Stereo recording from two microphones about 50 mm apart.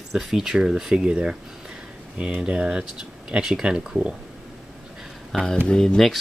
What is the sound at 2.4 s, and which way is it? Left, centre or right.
Speech, centre.